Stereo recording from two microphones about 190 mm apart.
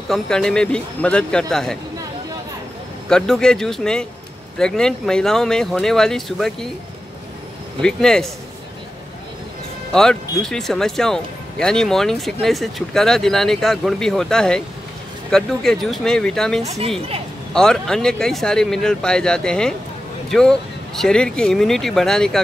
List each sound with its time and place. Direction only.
0.1 s speech: 5° left (ahead or behind)
3.1 s speech: 5° left (ahead or behind)
7.8 s speech: 5° left (ahead or behind)
9.9 s speech: 5° left (ahead or behind)
16.6 s a woman's voice: 35° right (ahead or behind)
17.6 s speech: 5° left (ahead or behind)